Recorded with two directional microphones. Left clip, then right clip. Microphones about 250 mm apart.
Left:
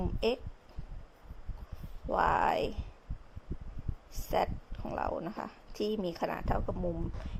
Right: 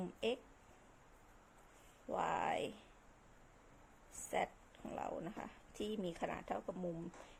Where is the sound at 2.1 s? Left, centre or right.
Left.